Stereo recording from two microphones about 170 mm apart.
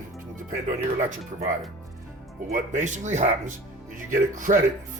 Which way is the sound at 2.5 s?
45° right (ahead or behind).